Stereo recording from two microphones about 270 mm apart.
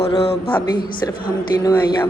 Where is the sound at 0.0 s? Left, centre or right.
Left.